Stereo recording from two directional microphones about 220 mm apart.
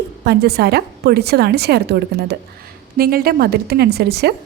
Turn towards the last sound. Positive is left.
turn(degrees=-45)  # may be behind; listen again after turning